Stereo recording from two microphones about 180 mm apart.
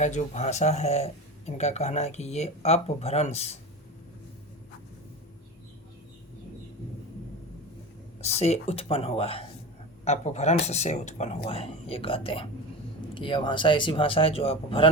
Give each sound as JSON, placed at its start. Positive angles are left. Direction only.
{"t": 0.0, "sound": "speech", "side_deg": 40}
{"t": 8.2, "sound": "speech", "side_deg": 35}